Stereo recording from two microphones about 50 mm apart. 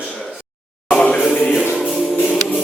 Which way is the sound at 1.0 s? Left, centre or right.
Left.